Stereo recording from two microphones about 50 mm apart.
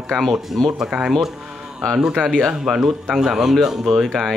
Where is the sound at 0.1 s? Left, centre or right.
Centre.